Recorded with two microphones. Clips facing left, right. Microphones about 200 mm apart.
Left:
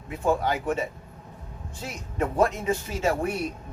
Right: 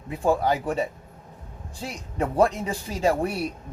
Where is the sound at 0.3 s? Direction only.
35° right (ahead or behind).